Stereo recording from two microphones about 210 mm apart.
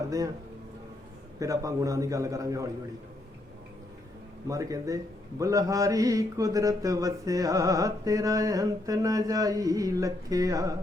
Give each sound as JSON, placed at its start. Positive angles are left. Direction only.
{"t": 1.4, "sound": "mantra", "side_deg": -15}
{"t": 4.4, "sound": "mantra", "side_deg": -15}